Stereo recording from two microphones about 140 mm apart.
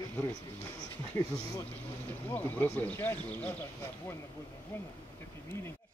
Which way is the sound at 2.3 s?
15° left (ahead or behind).